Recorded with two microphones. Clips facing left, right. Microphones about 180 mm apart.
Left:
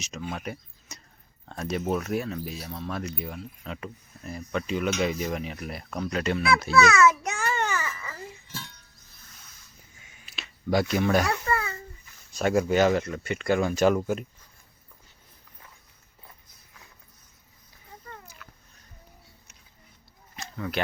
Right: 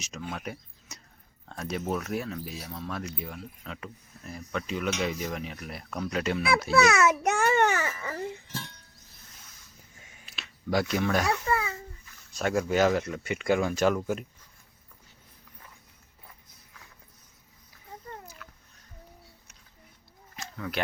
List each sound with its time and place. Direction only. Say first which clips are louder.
0.3 s speech: left 2 dB; centre (ahead or behind)
6.9 s babbling: left 2 dB; 60° right (ahead or behind)
10.2 s speech: left 4 dB; centre (ahead or behind)
11.4 s babbling: even; 10° right (ahead or behind)
12.3 s speech: left 3 dB; 5° left (ahead or behind)
13.7 s speech: left 3 dB; centre (ahead or behind)
20.3 s a sound: left 2 dB; 5° right (ahead or behind)